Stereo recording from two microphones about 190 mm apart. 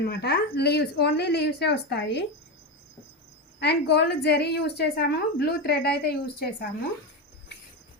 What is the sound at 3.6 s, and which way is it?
A woman's voice, 60° left (ahead or behind).